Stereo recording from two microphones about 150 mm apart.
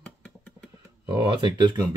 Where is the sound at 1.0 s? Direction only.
30° right (ahead or behind).